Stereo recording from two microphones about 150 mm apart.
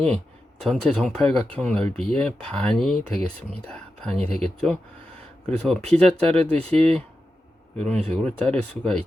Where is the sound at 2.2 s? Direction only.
5° left (ahead or behind).